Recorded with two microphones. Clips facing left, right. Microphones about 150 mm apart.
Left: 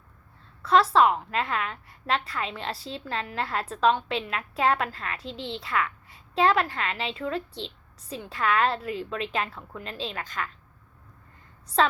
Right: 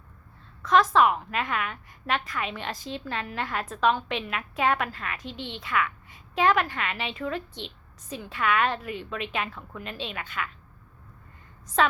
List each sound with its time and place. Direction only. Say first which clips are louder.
0.6 s a woman's voice: left 1 dB; 30° left (ahead or behind)
11.8 s a woman's voice: left 1 dB; 30° left (ahead or behind)